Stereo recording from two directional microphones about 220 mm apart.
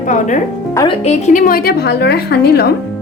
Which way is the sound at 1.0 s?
30° left (ahead or behind).